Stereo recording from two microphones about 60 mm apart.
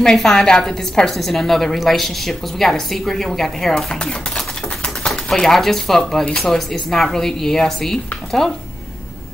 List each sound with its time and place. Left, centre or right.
0.0 s a woman's voice: centre